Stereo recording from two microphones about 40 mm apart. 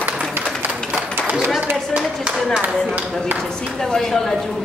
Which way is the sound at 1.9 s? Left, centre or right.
Right.